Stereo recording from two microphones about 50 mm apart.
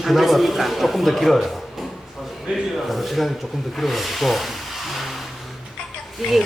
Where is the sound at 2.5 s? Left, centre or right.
Right.